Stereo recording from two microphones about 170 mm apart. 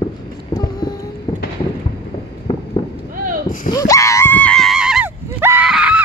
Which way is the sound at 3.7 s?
20° left (ahead or behind).